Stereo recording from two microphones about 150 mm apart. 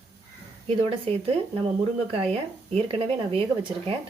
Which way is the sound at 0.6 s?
40° right (ahead or behind).